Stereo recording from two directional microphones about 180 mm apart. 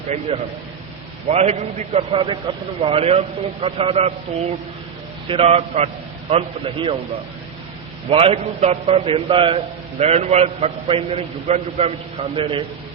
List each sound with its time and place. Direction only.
1.3 s a man's voice: 35° right (ahead or behind)
5.3 s a man's voice: 35° right (ahead or behind)
8.1 s a man's voice: 30° right (ahead or behind)